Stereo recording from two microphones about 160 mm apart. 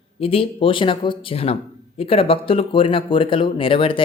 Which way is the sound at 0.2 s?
35° left (ahead or behind).